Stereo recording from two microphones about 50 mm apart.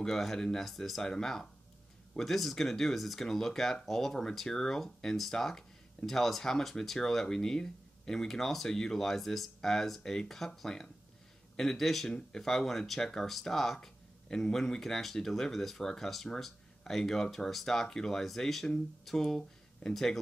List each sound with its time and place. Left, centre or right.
0.0 s speech: centre
12.1 s speech: centre
12.4 s speech: centre